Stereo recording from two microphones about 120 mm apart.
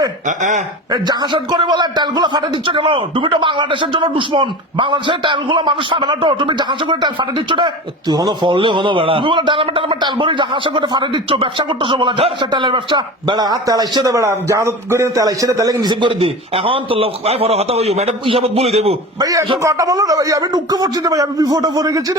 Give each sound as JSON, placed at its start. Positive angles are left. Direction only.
{"t": 0.3, "sound": "speech", "side_deg": -90}
{"t": 0.9, "sound": "a man's voice", "side_deg": -35}
{"t": 19.2, "sound": "a man's voice", "side_deg": -30}